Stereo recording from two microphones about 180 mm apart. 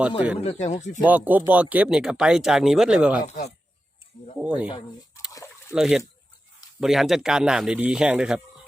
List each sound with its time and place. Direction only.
0.4 s speech: 40° left (ahead or behind)
1.0 s speech: 10° right (ahead or behind)
3.2 s speech: 40° left (ahead or behind)
4.4 s speech: 5° right (ahead or behind)
5.3 s a sound: 15° left (ahead or behind)
5.7 s speech: 5° right (ahead or behind)